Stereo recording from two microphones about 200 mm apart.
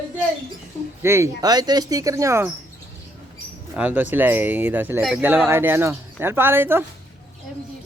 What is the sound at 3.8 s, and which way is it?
Speech, 5° right (ahead or behind).